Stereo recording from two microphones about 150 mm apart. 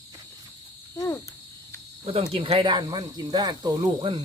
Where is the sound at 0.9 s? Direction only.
20° left (ahead or behind).